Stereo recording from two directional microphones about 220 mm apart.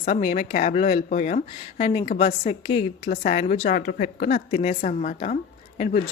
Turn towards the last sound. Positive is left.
turn(degrees=30)  # may be behind; listen again after turning